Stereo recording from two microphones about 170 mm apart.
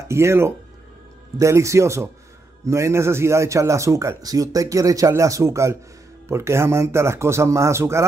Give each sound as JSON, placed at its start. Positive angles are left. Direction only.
{"t": 0.1, "sound": "speech", "side_deg": -15}